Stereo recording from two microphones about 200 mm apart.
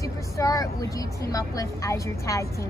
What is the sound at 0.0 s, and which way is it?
A woman's voice, 15° left (ahead or behind).